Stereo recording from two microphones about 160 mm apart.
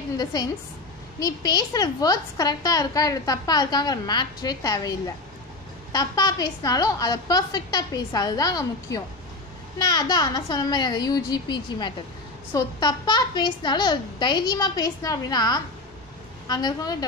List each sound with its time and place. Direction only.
0.2 s a woman's voice: 25° left (ahead or behind)